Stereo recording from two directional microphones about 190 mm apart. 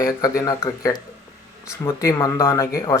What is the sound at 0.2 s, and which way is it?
Speech, 15° left (ahead or behind).